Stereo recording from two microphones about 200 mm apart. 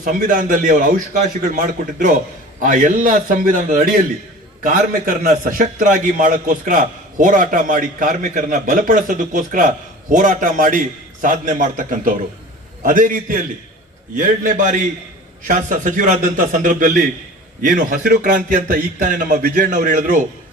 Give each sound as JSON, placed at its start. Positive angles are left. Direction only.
{"t": 0.0, "sound": "a man's voice", "side_deg": -40}